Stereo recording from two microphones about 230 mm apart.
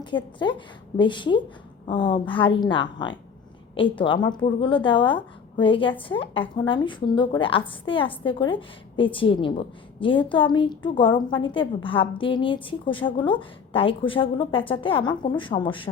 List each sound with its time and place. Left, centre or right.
0.0 s a woman's voice: centre